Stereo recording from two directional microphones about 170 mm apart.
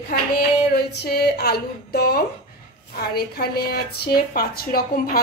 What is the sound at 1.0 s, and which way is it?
A woman's voice, 65° left (ahead or behind).